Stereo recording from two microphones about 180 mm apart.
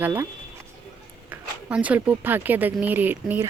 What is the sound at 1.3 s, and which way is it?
Speech, 10° right (ahead or behind).